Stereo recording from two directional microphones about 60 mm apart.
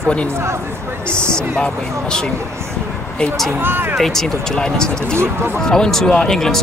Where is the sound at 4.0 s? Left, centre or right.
Centre.